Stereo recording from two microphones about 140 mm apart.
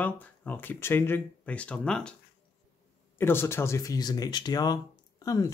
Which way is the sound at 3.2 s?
15° left (ahead or behind).